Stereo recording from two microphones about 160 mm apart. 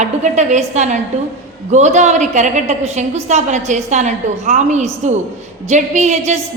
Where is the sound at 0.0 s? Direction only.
45° right (ahead or behind).